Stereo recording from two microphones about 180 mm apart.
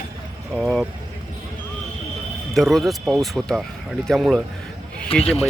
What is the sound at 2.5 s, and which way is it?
Speech, centre (ahead or behind).